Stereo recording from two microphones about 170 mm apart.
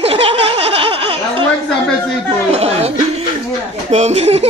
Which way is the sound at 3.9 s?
40° right (ahead or behind).